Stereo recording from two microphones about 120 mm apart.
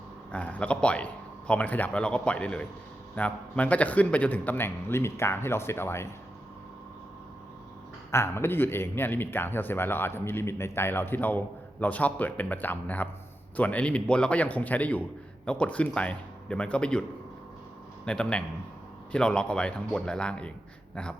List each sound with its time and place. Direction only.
0.3 s a man's voice: 10° left (ahead or behind)
8.1 s speech: 20° left (ahead or behind)
18.0 s speech: 10° left (ahead or behind)